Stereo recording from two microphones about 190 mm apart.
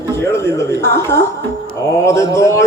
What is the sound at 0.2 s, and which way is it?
A woman's voice, 15° left (ahead or behind).